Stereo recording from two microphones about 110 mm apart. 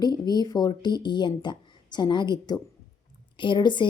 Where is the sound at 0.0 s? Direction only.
40° left (ahead or behind).